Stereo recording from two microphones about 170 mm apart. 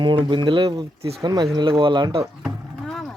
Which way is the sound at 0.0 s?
25° right (ahead or behind).